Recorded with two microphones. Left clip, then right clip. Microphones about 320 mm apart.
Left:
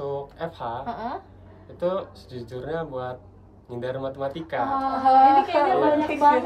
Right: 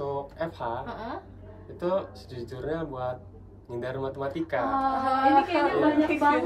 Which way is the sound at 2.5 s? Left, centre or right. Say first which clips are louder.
Left 3 dB; centre.